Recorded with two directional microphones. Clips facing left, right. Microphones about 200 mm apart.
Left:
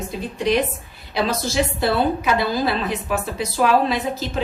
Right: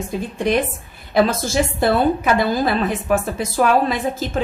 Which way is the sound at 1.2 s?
50° right (ahead or behind).